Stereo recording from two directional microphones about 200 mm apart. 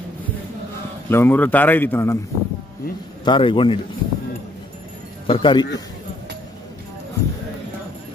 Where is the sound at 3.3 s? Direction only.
25° left (ahead or behind).